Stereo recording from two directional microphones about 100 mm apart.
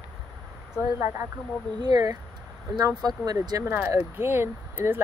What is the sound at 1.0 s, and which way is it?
Speech, 25° right (ahead or behind).